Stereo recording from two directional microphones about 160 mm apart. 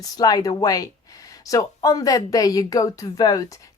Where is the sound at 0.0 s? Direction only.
25° left (ahead or behind).